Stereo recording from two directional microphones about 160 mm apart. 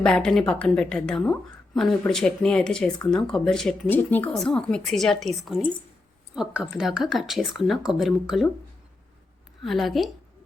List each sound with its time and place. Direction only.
0.0 s a woman's voice: 5° left (ahead or behind)
9.6 s a woman's voice: centre (ahead or behind)